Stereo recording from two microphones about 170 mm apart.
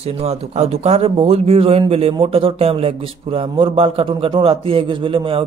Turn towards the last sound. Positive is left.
turn(degrees=-30)  # may be behind; listen again after turning